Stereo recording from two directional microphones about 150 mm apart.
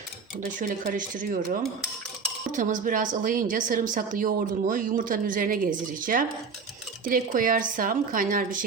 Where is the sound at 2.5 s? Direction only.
60° right (ahead or behind).